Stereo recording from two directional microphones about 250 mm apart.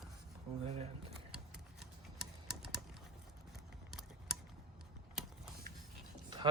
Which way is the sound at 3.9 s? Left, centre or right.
Centre.